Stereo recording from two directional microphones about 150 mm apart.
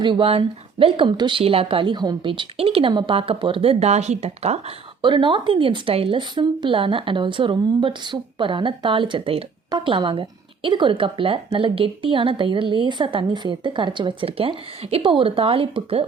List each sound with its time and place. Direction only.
0.0 s speech: 35° right (ahead or behind)
5.0 s speech: 35° right (ahead or behind)